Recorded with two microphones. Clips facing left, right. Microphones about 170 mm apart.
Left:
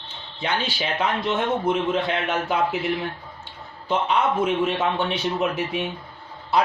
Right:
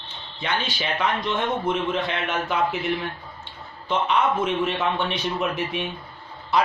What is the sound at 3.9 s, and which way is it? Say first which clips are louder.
A man's voice: even; 30° left (ahead or behind).